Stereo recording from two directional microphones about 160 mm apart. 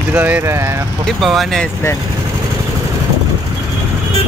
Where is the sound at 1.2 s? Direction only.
Centre (ahead or behind).